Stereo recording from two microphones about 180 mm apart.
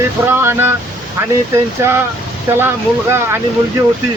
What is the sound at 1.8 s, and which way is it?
Speech, 10° right (ahead or behind).